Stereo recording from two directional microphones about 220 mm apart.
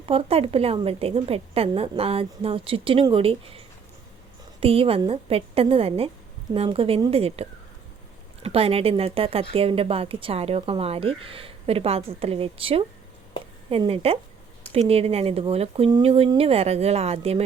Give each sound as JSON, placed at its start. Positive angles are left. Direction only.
{"t": 0.0, "sound": "speech", "side_deg": -25}
{"t": 4.6, "sound": "speech", "side_deg": -25}